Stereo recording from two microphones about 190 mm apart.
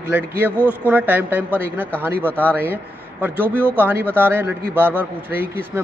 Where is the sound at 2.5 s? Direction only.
10° right (ahead or behind).